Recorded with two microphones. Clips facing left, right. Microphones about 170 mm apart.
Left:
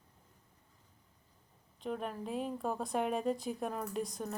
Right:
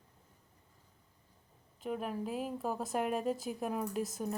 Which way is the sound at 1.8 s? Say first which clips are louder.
Right 2 dB; 5° right (ahead or behind).